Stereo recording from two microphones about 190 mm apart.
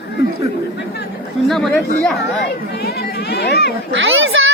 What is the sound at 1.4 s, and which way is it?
Speech, centre (ahead or behind).